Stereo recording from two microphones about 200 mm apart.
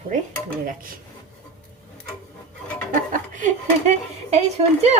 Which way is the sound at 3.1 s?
40° right (ahead or behind).